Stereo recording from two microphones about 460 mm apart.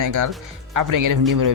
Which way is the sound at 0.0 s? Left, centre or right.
Right.